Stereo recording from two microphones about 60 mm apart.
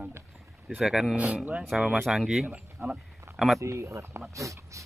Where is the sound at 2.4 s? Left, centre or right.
Centre.